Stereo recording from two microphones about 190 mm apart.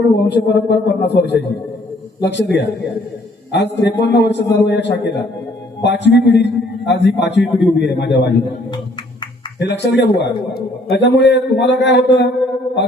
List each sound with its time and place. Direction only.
0.3 s a man's voice: 65° left (ahead or behind)
9.6 s a man's voice: 65° left (ahead or behind)